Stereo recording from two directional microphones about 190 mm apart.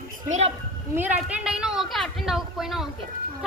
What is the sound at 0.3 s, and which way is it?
Speech, 35° right (ahead or behind).